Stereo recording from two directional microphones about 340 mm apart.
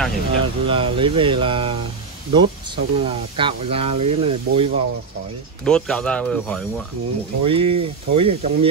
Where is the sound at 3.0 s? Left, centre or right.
Centre.